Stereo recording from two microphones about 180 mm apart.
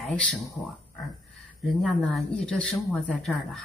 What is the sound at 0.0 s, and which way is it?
Speech, 5° left (ahead or behind).